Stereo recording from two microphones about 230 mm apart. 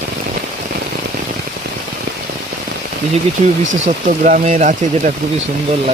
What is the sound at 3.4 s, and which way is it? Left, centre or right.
Speech, right.